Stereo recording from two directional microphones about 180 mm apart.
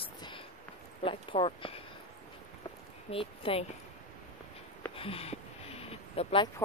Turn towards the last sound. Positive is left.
turn(degrees=35)  # may be behind; listen again after turning